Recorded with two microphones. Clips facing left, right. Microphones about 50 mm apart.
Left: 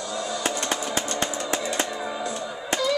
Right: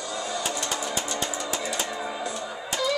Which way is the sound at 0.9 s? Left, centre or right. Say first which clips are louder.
Left 2 dB; left.